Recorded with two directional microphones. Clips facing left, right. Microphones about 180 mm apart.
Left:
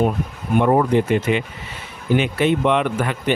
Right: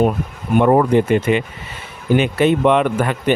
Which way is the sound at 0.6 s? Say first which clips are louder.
Right 3 dB; 70° right (ahead or behind).